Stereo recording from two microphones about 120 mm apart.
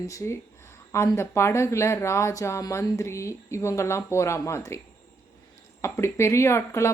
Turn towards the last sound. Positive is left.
turn(degrees=20)  # may be behind; listen again after turning